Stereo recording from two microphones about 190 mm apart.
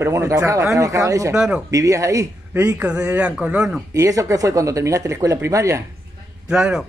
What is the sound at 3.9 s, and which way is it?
A man's voice, 15° right (ahead or behind).